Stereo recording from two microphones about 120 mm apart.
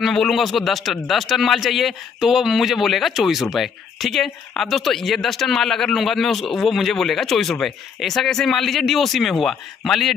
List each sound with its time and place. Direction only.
0.0 s a man's voice: centre (ahead or behind)